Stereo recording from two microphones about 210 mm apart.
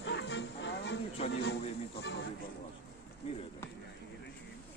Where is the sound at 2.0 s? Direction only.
55° left (ahead or behind).